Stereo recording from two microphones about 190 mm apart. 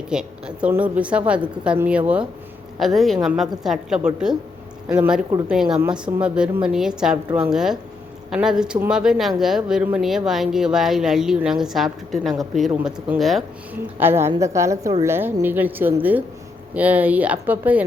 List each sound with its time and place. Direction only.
0.1 s speech: 5° right (ahead or behind)
14.0 s speech: 15° right (ahead or behind)